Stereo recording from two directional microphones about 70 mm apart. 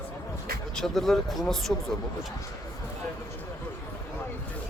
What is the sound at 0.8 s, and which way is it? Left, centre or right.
Speech, centre.